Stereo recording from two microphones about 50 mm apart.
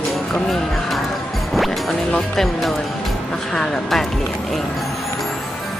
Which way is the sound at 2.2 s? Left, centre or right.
Centre.